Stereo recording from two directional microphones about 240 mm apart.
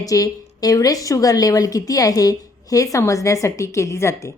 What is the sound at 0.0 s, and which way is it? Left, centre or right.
A woman's voice, centre.